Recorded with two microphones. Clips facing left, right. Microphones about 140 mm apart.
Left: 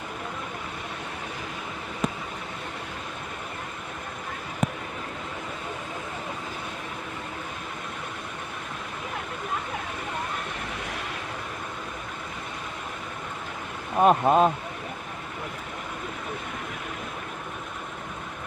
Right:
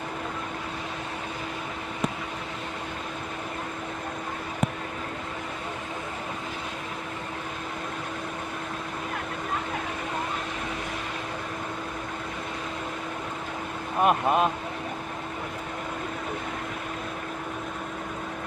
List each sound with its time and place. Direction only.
14.0 s speech: 30° left (ahead or behind)